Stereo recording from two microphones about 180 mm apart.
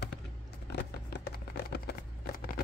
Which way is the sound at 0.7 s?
70° left (ahead or behind).